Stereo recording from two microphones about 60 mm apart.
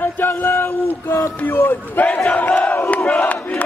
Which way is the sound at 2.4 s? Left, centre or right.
Left.